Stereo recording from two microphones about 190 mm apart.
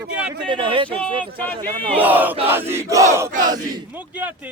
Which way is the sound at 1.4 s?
10° left (ahead or behind).